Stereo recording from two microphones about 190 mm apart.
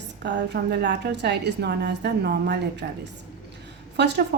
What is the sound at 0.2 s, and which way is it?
A woman's voice, 65° right (ahead or behind).